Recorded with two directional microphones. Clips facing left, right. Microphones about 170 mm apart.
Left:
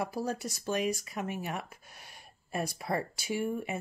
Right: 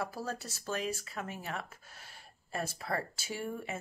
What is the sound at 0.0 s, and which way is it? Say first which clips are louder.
Speech: left 5 dB; 15° left (ahead or behind).